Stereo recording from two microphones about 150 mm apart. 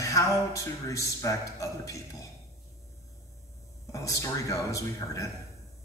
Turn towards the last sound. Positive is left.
turn(degrees=20)  # may be behind; listen again after turning